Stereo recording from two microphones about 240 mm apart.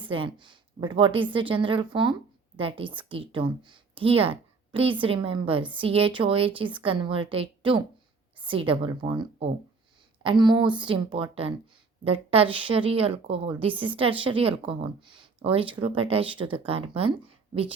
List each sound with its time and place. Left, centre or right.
0.0 s a woman's voice: right